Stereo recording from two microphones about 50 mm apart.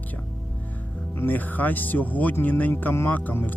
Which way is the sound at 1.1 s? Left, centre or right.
Left.